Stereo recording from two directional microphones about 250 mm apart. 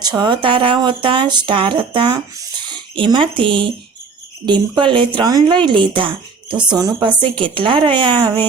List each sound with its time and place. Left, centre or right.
0.0 s speech: centre